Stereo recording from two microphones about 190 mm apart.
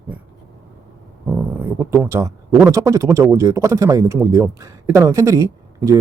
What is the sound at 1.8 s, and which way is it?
Speech, 15° right (ahead or behind).